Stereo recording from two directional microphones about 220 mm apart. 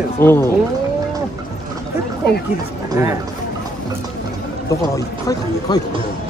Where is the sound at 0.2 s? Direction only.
10° left (ahead or behind).